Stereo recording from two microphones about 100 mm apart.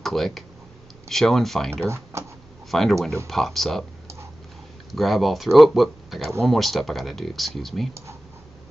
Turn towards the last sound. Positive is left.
turn(degrees=0)  # may be behind; listen again after turning